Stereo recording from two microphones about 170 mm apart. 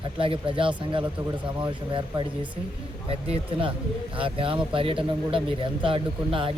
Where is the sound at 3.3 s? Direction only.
30° right (ahead or behind).